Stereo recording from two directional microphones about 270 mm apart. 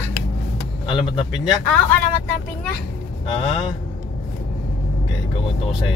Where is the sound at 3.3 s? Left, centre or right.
Centre.